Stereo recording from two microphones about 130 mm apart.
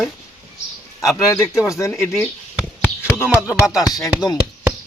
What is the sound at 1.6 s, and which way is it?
Speech, 25° left (ahead or behind).